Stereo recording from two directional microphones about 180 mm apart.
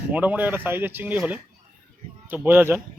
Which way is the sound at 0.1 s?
10° right (ahead or behind).